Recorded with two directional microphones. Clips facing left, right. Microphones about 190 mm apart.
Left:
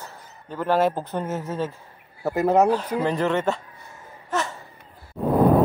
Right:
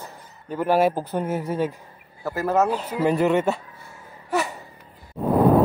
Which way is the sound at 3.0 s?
10° right (ahead or behind).